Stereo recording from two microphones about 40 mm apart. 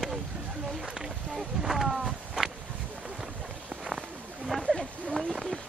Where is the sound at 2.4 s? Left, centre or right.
Centre.